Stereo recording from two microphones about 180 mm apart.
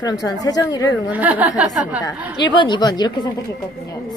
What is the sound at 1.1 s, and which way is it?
Speech, 10° right (ahead or behind).